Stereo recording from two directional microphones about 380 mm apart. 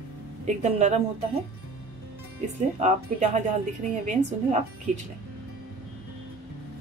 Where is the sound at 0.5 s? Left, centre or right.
Centre.